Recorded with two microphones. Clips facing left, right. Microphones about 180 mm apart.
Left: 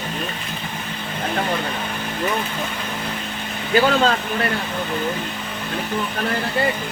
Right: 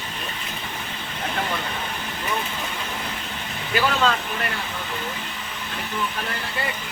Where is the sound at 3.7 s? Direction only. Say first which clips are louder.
Left 5 dB; 35° left (ahead or behind).